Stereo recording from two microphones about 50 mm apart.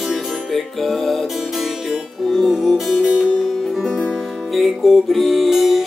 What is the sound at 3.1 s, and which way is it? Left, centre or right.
Music, centre.